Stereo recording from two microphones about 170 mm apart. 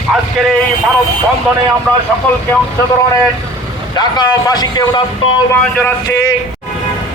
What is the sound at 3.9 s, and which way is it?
Speech, 25° left (ahead or behind).